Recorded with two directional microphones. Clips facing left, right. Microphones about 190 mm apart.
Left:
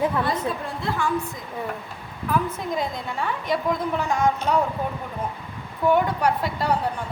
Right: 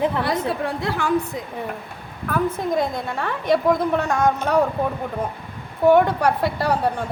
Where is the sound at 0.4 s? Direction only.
75° right (ahead or behind).